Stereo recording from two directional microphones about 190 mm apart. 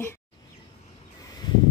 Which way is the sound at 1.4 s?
20° left (ahead or behind).